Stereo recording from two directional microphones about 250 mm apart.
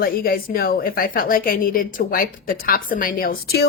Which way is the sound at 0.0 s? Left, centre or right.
Left.